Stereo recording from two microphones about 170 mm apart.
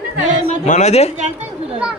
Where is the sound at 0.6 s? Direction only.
45° left (ahead or behind).